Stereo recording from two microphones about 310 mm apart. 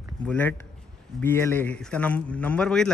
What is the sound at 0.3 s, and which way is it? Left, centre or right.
Speech, centre.